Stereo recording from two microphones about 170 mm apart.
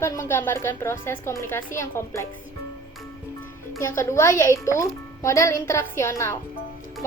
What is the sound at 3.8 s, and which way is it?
A woman's voice, 15° left (ahead or behind).